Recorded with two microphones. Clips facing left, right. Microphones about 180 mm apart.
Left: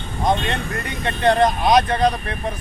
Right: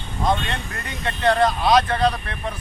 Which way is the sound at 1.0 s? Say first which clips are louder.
Left 2 dB; 20° left (ahead or behind).